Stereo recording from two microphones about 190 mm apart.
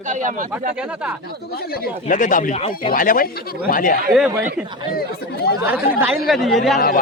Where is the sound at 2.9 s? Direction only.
45° left (ahead or behind).